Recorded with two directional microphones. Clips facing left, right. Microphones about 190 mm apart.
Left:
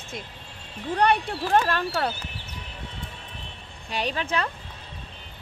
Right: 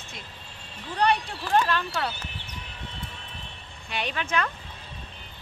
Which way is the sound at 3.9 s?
35° left (ahead or behind).